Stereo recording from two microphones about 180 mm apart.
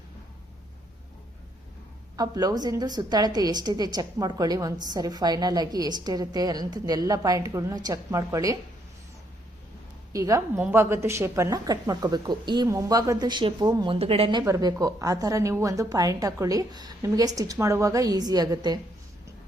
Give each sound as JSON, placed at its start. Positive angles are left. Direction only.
{"t": 2.1, "sound": "a woman's voice", "side_deg": -20}
{"t": 10.1, "sound": "a woman's voice", "side_deg": -20}